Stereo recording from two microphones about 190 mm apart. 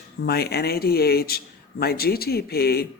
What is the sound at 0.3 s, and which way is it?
Speech, 55° left (ahead or behind).